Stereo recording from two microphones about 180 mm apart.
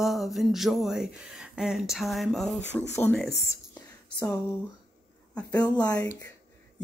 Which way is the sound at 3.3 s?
70° left (ahead or behind).